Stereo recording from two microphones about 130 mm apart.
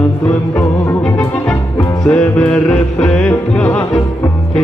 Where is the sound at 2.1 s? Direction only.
5° left (ahead or behind).